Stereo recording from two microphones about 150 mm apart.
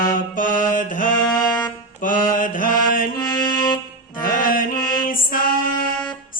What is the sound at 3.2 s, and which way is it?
Music, 25° left (ahead or behind).